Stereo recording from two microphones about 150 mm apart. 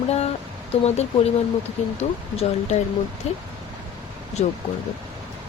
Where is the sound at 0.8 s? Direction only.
45° left (ahead or behind).